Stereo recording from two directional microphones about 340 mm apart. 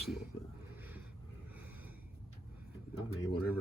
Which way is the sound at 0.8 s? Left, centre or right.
Centre.